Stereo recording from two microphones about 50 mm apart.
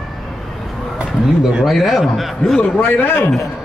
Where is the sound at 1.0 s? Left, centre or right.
Centre.